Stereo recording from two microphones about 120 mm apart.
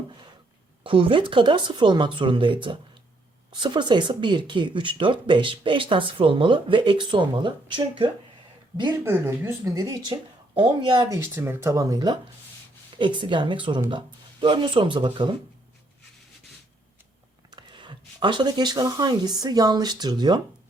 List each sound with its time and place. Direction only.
0.9 s speech: 45° right (ahead or behind)
9.0 s speech: 20° right (ahead or behind); by 15.3 s 45° right (ahead or behind)
17.5 s speech: 40° right (ahead or behind)